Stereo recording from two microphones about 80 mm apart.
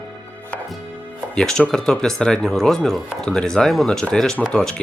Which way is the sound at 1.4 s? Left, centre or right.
Centre.